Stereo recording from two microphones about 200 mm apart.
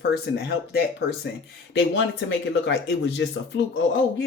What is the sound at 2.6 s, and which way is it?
Speech, 60° left (ahead or behind).